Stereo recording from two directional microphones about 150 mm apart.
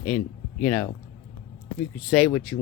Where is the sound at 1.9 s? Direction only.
5° left (ahead or behind).